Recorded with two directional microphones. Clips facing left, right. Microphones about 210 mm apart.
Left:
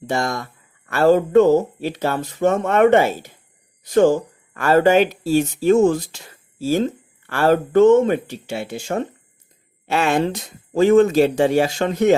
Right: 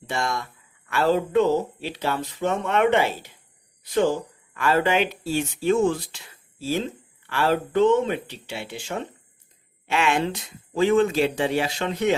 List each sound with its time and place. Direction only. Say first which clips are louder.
0.1 s speech: left 5 dB; 40° left (ahead or behind)